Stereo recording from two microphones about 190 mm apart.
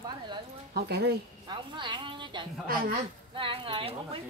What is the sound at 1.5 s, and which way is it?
A woman's voice, 25° right (ahead or behind).